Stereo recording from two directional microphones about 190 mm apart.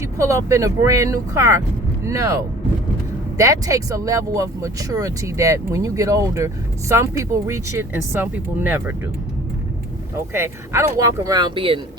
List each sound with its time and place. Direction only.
0.0 s speech: 15° right (ahead or behind)
10.3 s speech: 15° right (ahead or behind)